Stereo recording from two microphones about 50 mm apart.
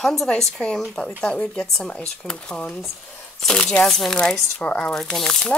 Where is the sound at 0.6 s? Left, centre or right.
Left.